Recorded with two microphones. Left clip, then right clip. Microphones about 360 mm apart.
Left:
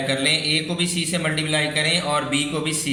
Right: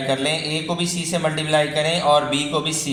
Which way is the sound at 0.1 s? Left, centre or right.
Centre.